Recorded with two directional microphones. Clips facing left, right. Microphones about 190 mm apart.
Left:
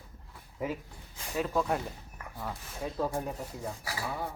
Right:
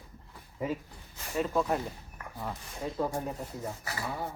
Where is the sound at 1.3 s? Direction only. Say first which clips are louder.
Right 1 dB; centre (ahead or behind).